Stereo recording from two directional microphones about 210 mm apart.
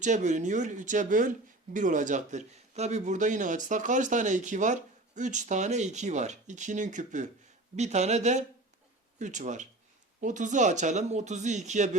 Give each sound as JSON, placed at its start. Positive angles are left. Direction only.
{"t": 0.0, "sound": "a man's voice", "side_deg": -35}